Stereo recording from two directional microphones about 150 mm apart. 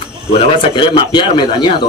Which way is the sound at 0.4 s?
40° left (ahead or behind).